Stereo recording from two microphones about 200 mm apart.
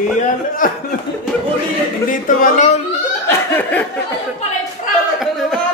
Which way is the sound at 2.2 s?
40° left (ahead or behind).